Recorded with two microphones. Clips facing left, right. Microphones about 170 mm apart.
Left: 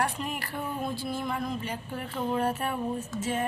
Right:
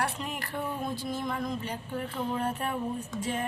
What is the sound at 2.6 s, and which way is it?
Speech, 5° left (ahead or behind).